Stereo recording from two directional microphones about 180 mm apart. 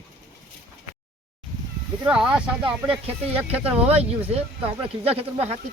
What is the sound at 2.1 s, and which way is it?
Speech, 5° right (ahead or behind).